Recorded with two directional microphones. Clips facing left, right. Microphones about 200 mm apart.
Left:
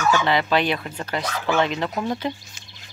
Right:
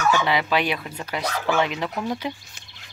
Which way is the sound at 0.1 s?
10° right (ahead or behind).